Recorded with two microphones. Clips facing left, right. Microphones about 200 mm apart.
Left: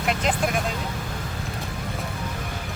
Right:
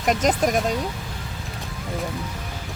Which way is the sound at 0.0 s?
40° right (ahead or behind).